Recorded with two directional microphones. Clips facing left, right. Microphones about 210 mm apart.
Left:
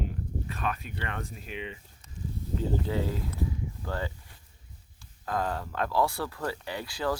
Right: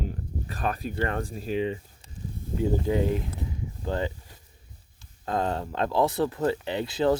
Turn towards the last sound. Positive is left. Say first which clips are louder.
# right 7 dB
turn(degrees=-25)  # may be behind; listen again after turning